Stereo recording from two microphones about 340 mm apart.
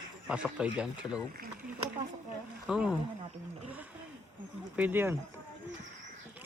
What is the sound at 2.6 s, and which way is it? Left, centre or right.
Speech, centre.